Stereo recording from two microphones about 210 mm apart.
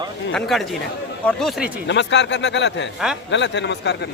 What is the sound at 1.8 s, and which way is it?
Speech, 55° left (ahead or behind).